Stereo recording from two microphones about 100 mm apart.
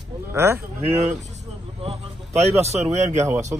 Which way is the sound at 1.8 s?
90° right.